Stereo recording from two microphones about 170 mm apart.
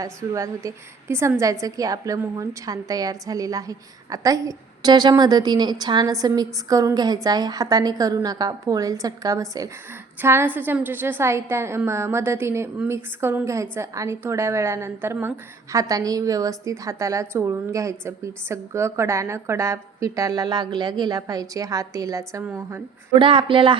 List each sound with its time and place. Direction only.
0.0 s a woman's voice: 20° right (ahead or behind)
23.1 s a woman's voice: 30° right (ahead or behind)